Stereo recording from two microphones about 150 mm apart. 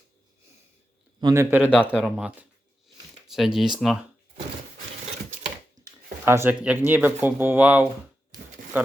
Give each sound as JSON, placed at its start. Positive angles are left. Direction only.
{"t": 1.2, "sound": "a man's voice", "side_deg": -20}
{"t": 1.7, "sound": "speech", "side_deg": 10}
{"t": 2.0, "sound": "a man's voice", "side_deg": -5}
{"t": 5.8, "sound": "a man's voice", "side_deg": -15}